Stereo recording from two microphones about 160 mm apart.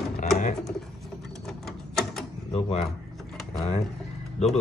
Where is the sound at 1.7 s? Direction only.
Centre (ahead or behind).